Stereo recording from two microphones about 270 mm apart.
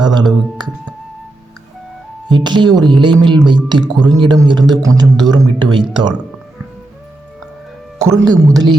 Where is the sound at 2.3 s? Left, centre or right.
Centre.